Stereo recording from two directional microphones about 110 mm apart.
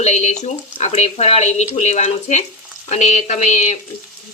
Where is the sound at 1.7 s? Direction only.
90° left.